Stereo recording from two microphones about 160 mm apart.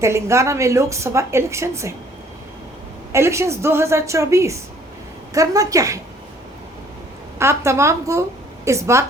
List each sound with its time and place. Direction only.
0.0 s a woman's voice: 15° right (ahead or behind)
3.1 s a woman's voice: 15° right (ahead or behind)
7.3 s a woman's voice: 15° right (ahead or behind)